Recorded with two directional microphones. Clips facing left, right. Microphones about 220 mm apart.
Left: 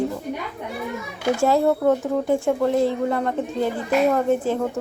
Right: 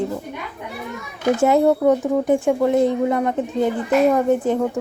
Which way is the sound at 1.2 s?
20° right (ahead or behind).